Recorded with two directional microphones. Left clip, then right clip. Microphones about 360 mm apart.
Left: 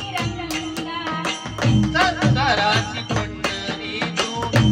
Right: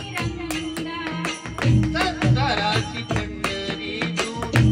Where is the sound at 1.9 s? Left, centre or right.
Left.